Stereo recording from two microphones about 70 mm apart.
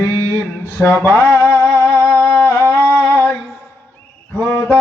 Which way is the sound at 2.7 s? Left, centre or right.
Left.